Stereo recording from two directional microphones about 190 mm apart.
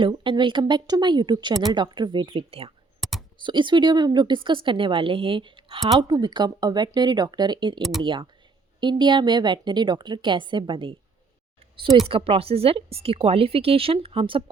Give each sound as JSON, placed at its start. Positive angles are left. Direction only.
{"t": 0.0, "sound": "a woman's voice", "side_deg": -25}
{"t": 3.0, "sound": "typing", "side_deg": 0}
{"t": 3.3, "sound": "a woman's voice", "side_deg": -25}
{"t": 7.8, "sound": "speech", "side_deg": 0}
{"t": 8.0, "sound": "a woman's voice", "side_deg": -25}
{"t": 12.0, "sound": "a woman's voice", "side_deg": -30}